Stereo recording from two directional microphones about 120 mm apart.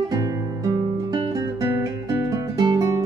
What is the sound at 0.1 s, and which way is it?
Music, 30° right (ahead or behind).